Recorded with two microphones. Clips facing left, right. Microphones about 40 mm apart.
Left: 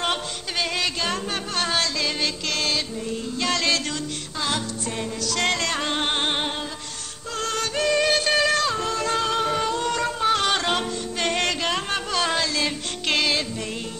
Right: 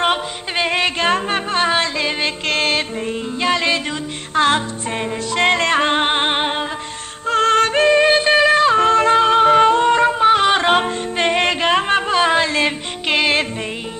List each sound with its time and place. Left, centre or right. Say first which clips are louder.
0.0 s music: right 7 dB; right
3.4 s music: right 6 dB; right
4.4 s music: right 11 dB; right
8.7 s music: right 11 dB; right